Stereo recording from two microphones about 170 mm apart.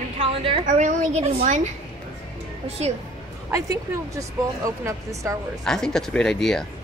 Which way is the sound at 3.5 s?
20° right (ahead or behind).